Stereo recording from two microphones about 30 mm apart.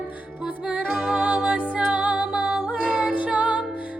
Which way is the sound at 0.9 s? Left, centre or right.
Centre.